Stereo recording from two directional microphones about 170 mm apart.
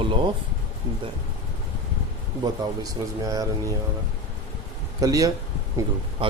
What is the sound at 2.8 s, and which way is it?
Speech, 20° right (ahead or behind).